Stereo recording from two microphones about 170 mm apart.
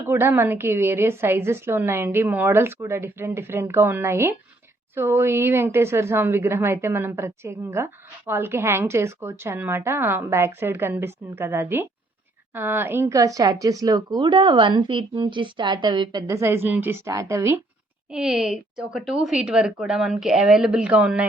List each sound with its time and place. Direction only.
0.0 s a woman's voice: 15° right (ahead or behind)
18.1 s a woman's voice: 5° right (ahead or behind)